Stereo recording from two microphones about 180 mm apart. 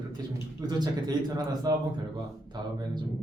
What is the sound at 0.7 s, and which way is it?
Speech, 25° right (ahead or behind).